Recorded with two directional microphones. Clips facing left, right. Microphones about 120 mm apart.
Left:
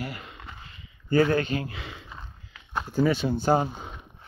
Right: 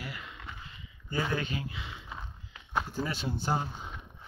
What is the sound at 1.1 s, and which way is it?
Speech, 70° left (ahead or behind).